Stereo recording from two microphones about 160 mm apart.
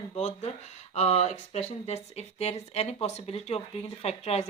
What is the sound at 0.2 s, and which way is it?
A woman's voice, 40° left (ahead or behind).